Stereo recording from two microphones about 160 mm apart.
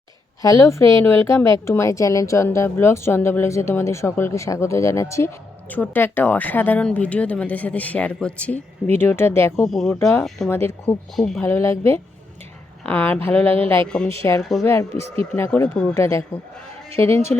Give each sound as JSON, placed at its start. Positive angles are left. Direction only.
{"t": 0.4, "sound": "a woman's voice", "side_deg": 20}
{"t": 9.6, "sound": "speech", "side_deg": 0}
{"t": 10.0, "sound": "speech", "side_deg": 15}
{"t": 10.2, "sound": "speech", "side_deg": 0}
{"t": 11.4, "sound": "speech", "side_deg": 15}
{"t": 14.6, "sound": "a woman's voice", "side_deg": 20}
{"t": 14.9, "sound": "speech", "side_deg": -40}
{"t": 15.4, "sound": "speech", "side_deg": 10}
{"t": 16.0, "sound": "a woman's voice", "side_deg": 20}